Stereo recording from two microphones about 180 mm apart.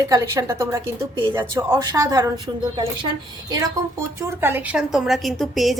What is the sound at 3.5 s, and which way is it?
A woman's voice, 20° right (ahead or behind).